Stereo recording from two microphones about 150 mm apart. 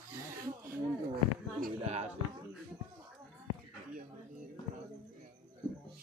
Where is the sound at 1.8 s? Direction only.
45° right (ahead or behind).